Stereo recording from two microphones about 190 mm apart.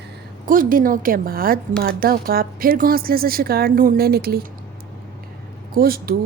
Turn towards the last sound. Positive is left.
turn(degrees=-50)  # may be behind; listen again after turning